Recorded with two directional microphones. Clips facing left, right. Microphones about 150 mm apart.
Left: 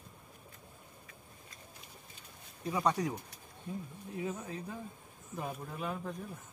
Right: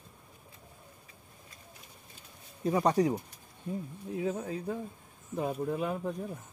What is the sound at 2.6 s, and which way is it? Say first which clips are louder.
Speech: right 6 dB; 40° right (ahead or behind).